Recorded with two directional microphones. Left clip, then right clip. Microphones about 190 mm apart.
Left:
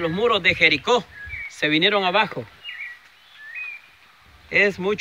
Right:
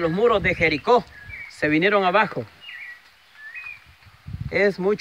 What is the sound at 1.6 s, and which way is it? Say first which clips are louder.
Speech: even; 30° right (ahead or behind).